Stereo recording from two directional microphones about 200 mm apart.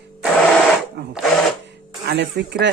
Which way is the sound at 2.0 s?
55° right (ahead or behind).